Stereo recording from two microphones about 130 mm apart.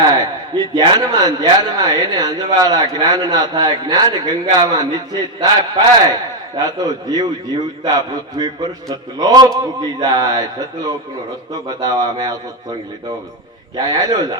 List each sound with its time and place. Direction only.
0.0 s a man's voice: 30° right (ahead or behind)
11.7 s speech: 30° right (ahead or behind)
13.7 s a man's voice: 30° right (ahead or behind)